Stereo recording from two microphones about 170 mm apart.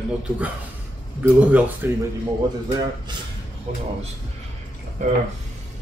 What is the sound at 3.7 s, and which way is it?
Speech, 40° right (ahead or behind).